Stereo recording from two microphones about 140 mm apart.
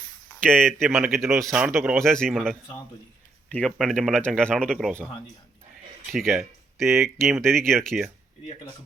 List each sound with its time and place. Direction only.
0.4 s speech: 5° left (ahead or behind)
2.0 s speech: 5° left (ahead or behind)
6.1 s speech: centre (ahead or behind)
6.8 s speech: 20° right (ahead or behind)
7.2 s speech: centre (ahead or behind)